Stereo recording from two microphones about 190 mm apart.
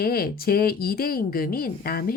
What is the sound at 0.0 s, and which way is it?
Speech, 55° left (ahead or behind).